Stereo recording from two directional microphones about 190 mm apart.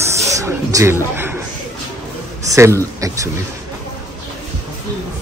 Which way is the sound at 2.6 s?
15° right (ahead or behind).